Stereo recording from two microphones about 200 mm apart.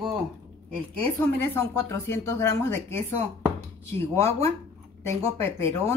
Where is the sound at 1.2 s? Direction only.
10° left (ahead or behind).